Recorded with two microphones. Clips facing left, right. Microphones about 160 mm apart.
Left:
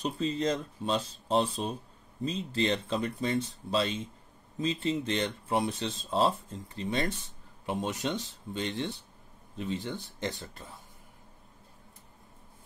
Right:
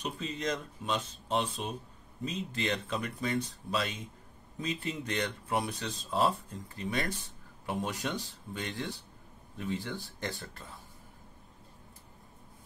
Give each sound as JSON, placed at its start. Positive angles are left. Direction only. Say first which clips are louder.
{"t": 0.0, "sound": "speech", "louder": "left 6 dB", "side_deg": 30}